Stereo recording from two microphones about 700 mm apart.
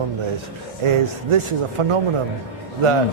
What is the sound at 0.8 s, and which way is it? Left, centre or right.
Speech, right.